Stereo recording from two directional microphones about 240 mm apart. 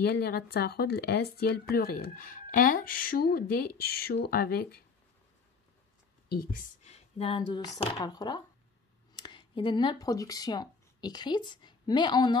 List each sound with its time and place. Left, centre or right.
0.0 s speech: left
6.2 s speech: left; by 12.4 s centre